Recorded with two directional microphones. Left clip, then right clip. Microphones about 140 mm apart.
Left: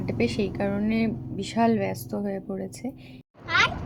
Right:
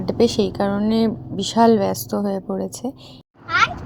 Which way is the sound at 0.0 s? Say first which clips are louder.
Right 9 dB; 50° right (ahead or behind).